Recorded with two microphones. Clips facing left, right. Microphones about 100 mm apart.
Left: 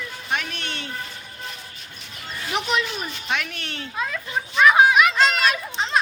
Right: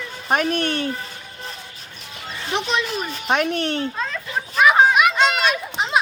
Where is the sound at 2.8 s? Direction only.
35° right (ahead or behind).